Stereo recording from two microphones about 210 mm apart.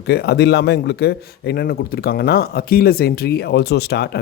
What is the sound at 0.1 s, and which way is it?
Speech, 50° left (ahead or behind).